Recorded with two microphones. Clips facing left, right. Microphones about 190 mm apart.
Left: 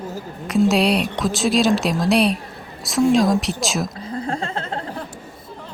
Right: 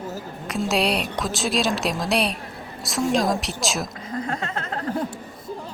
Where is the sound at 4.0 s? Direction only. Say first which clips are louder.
Left 3 dB; 30° left (ahead or behind).